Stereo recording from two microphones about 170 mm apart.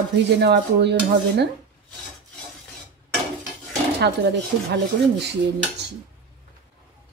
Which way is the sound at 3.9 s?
80° right.